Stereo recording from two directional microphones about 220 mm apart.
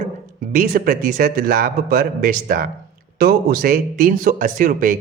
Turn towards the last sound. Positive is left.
turn(degrees=-35)  # may be behind; listen again after turning